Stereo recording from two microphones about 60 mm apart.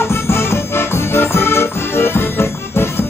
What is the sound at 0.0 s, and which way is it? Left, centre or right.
Music, left.